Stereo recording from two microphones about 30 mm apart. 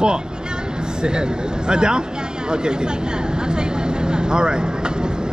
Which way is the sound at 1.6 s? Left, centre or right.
Right.